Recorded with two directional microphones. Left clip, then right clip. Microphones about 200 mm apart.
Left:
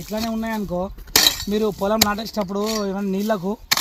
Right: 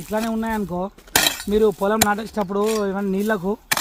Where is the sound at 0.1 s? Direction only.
35° left (ahead or behind).